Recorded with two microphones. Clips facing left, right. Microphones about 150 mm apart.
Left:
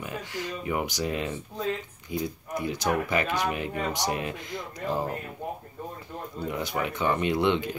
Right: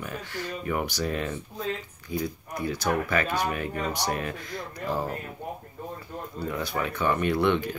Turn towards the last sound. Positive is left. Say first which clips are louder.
# right 1 dB
turn(degrees=20)  # may be behind; listen again after turning